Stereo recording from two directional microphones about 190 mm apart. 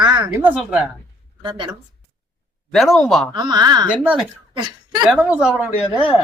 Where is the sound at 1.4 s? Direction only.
25° right (ahead or behind).